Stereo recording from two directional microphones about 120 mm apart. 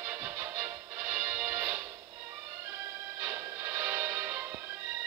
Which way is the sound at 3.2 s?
20° right (ahead or behind).